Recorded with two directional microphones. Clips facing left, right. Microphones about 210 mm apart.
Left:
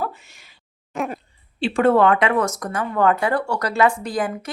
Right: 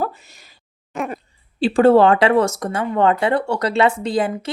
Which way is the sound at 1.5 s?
35° right (ahead or behind).